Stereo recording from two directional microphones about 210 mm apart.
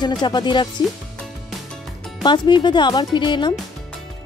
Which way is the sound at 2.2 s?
20° left (ahead or behind).